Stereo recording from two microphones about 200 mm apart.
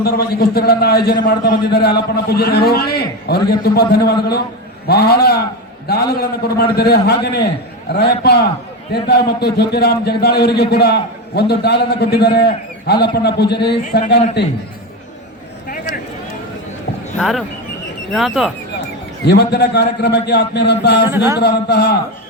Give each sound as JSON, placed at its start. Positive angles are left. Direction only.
{"t": 0.0, "sound": "a man's voice", "side_deg": 50}
{"t": 17.2, "sound": "speech", "side_deg": 0}
{"t": 19.2, "sound": "a man's voice", "side_deg": 55}